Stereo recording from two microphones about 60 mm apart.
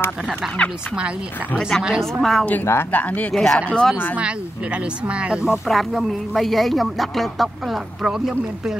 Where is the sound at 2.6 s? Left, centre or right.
Left.